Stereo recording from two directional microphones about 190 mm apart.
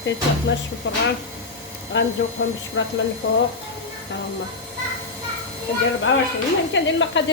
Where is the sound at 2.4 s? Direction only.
90° left.